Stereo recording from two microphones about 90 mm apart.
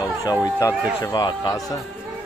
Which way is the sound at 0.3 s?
40° left (ahead or behind).